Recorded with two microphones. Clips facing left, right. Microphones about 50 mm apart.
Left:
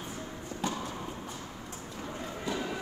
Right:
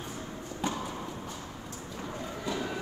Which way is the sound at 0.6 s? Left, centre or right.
Right.